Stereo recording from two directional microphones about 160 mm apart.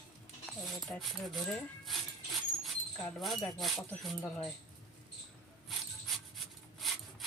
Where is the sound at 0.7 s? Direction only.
Centre (ahead or behind).